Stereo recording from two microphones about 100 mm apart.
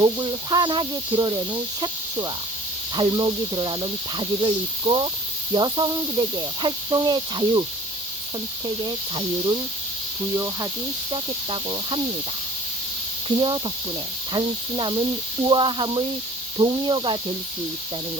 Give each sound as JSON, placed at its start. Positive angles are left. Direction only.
{"t": 0.0, "sound": "speech", "side_deg": -45}
{"t": 8.6, "sound": "speech", "side_deg": -40}
{"t": 10.3, "sound": "speech", "side_deg": -30}
{"t": 11.1, "sound": "speech", "side_deg": -50}
{"t": 13.2, "sound": "speech", "side_deg": -55}